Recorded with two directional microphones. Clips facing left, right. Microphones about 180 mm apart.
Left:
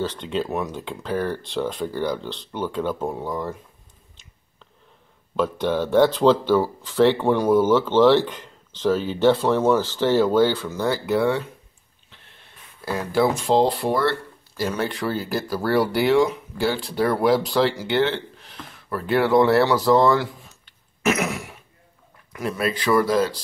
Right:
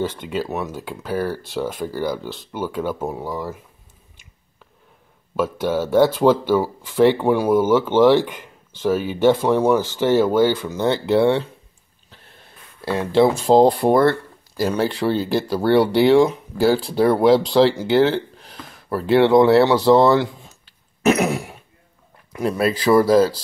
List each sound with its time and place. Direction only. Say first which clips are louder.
0.0 s speech: right 1 dB; 10° right (ahead or behind)
5.3 s speech: right 1 dB; 10° right (ahead or behind); by 11.4 s 30° right (ahead or behind)
12.8 s speech: right 5 dB; 25° right (ahead or behind)
13.6 s speech: right 8 dB; 50° right (ahead or behind)
14.6 s speech: right 5 dB; 30° right (ahead or behind)